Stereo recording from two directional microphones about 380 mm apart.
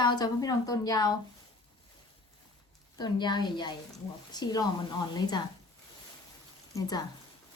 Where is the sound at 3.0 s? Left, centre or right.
Centre.